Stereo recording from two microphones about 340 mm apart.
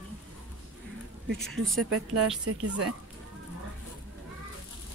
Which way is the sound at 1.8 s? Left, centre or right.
Right.